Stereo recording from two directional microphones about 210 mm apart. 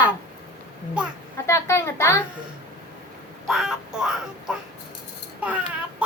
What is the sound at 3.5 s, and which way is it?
Child singing, centre (ahead or behind).